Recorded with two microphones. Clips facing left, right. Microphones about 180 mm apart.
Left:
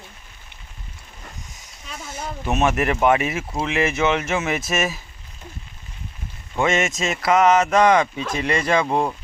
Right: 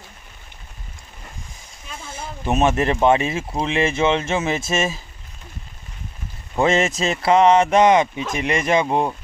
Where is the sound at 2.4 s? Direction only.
30° right (ahead or behind).